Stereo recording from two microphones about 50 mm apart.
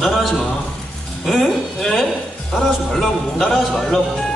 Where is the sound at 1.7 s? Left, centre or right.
Centre.